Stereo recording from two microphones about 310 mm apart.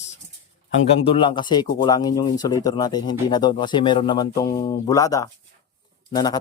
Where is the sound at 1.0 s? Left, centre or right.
Centre.